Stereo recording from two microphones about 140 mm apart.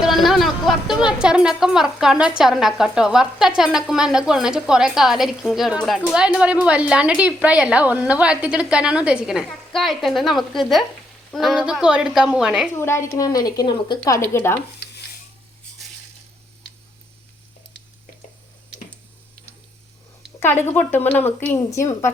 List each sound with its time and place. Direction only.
0.0 s a woman's voice: centre (ahead or behind)
12.7 s a woman's voice: 20° left (ahead or behind)
14.2 s a woman's voice: 15° left (ahead or behind)
20.4 s a woman's voice: 15° left (ahead or behind)